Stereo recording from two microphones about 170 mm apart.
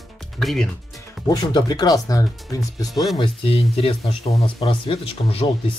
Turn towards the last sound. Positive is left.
turn(degrees=30)  # may be behind; listen again after turning